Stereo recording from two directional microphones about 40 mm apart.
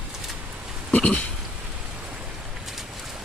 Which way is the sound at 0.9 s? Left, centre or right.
Left.